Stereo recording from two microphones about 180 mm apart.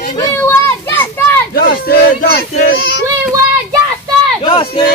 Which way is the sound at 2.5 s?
55° left (ahead or behind).